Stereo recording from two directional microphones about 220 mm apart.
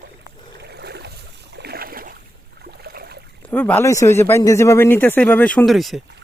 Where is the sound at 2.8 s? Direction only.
45° right (ahead or behind).